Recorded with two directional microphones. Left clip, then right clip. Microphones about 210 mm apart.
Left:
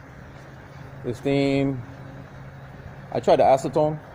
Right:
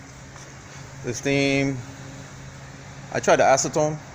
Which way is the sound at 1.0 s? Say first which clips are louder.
Right 1 dB; 10° left (ahead or behind).